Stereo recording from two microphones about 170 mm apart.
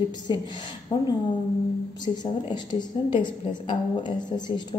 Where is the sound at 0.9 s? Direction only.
25° left (ahead or behind).